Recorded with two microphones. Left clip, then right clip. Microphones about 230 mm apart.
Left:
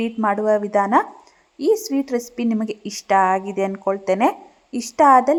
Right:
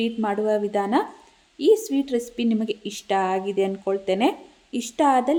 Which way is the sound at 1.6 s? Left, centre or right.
Left.